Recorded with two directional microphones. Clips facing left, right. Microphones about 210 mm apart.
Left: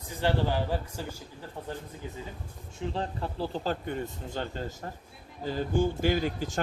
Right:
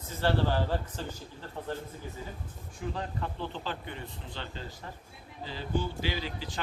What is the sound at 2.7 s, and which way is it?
Speech, 30° left (ahead or behind).